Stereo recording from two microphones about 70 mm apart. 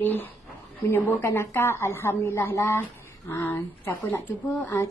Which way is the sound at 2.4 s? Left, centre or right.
Left.